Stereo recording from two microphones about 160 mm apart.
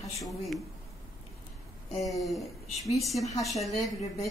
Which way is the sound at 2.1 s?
Centre (ahead or behind).